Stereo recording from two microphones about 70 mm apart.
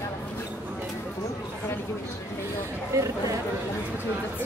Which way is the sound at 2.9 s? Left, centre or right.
Right.